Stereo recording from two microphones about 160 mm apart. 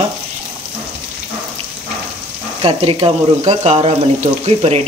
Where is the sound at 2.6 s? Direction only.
35° right (ahead or behind).